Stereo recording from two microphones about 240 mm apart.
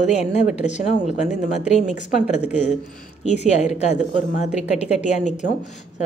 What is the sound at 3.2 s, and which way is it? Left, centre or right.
A woman's voice, left.